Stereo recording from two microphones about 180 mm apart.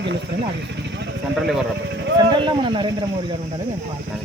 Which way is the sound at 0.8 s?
70° right (ahead or behind).